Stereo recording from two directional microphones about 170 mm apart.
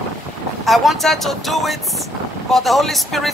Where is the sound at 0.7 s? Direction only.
Centre (ahead or behind).